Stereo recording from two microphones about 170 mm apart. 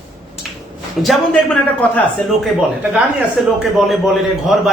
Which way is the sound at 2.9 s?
5° right (ahead or behind).